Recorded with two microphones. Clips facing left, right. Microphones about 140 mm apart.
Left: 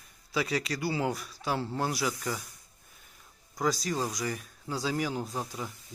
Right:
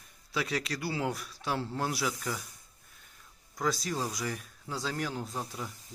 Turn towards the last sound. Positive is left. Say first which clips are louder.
# left 2 dB
turn(degrees=0)  # may be behind; listen again after turning